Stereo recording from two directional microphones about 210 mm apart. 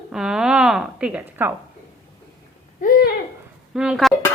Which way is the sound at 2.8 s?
45° left (ahead or behind).